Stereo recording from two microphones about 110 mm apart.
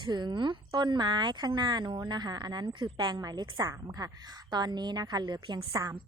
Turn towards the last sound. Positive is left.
turn(degrees=-45)  # may be behind; listen again after turning